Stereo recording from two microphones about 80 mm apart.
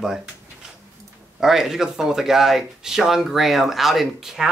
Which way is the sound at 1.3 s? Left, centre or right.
Centre.